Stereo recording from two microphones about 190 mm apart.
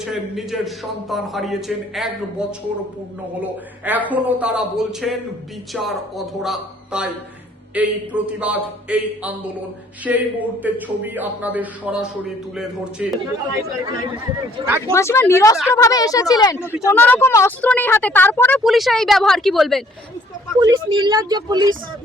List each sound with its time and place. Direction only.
0.0 s a man's voice: centre (ahead or behind)
14.6 s a man's voice: 15° right (ahead or behind)
14.9 s a woman's voice: 15° left (ahead or behind)
20.6 s speech: 20° right (ahead or behind)